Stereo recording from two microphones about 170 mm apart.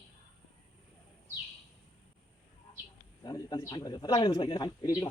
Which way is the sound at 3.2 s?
25° left (ahead or behind).